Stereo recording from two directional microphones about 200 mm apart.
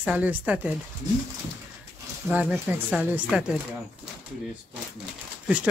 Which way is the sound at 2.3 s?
5° right (ahead or behind).